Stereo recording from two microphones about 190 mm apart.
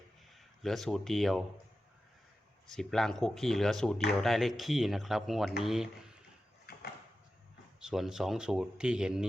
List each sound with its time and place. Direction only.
0.3 s a man's voice: centre (ahead or behind)
2.6 s speech: centre (ahead or behind)
7.8 s speech: 5° right (ahead or behind)